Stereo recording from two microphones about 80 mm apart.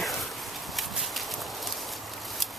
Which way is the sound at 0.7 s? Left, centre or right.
Centre.